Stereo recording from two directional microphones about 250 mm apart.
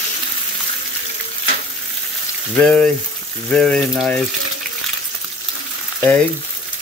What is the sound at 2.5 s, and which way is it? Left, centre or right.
Speech, centre.